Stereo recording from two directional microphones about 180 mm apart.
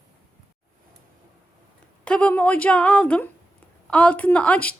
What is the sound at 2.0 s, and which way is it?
A woman's voice, 5° left (ahead or behind).